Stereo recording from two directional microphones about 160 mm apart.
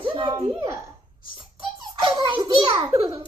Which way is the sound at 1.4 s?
30° right (ahead or behind).